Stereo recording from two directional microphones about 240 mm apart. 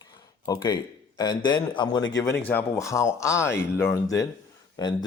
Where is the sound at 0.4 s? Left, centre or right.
Centre.